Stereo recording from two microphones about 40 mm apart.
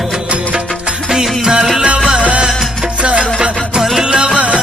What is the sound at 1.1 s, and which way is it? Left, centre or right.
Music, centre.